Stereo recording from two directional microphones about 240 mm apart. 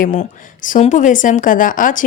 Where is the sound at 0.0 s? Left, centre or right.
Left.